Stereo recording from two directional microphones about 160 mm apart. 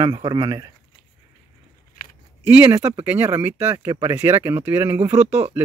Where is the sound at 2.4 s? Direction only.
10° right (ahead or behind).